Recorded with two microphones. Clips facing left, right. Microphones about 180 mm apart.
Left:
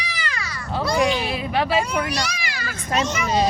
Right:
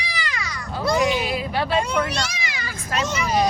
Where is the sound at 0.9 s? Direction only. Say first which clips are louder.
Left 1 dB; 20° right (ahead or behind).